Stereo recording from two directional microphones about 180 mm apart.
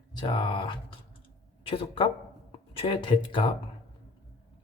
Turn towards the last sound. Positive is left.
turn(degrees=25)  # may be behind; listen again after turning